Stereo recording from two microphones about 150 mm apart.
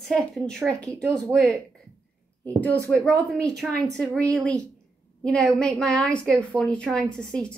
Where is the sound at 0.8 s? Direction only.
20° right (ahead or behind).